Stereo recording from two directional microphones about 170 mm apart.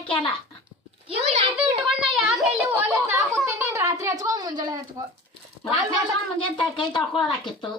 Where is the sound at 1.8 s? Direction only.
5° right (ahead or behind); by 5.0 s 25° right (ahead or behind).